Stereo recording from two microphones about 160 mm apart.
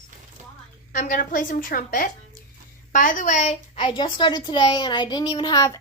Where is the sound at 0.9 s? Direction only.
60° left (ahead or behind).